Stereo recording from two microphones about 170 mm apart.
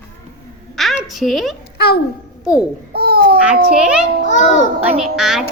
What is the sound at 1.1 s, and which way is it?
Speech, centre (ahead or behind).